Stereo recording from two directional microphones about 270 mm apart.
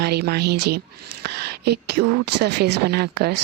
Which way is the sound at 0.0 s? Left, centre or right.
Right.